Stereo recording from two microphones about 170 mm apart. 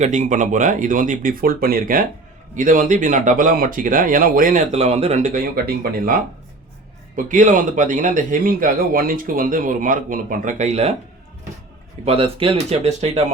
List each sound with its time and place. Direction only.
0.0 s speech: 45° right (ahead or behind); by 6.1 s 65° right (ahead or behind)
7.3 s speech: 50° right (ahead or behind)
12.0 s speech: 35° right (ahead or behind)